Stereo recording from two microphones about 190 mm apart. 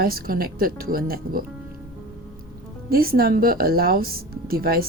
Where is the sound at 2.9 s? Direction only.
50° right (ahead or behind).